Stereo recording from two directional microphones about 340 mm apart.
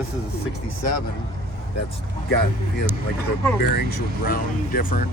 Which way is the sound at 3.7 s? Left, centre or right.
Left.